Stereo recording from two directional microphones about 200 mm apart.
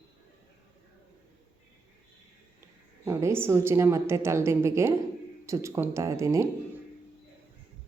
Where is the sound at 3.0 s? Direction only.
15° right (ahead or behind).